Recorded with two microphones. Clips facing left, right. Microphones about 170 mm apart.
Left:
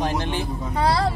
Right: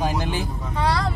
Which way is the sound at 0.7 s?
35° left (ahead or behind).